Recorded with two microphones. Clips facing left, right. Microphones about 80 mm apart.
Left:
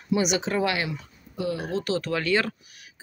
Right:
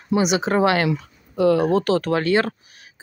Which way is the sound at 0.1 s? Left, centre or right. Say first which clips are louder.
Right 5 dB; right.